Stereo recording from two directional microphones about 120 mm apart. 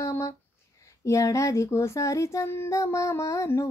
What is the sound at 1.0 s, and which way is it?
Speech, 25° left (ahead or behind).